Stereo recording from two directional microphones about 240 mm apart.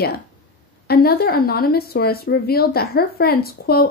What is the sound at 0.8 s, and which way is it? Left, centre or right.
Speech, left.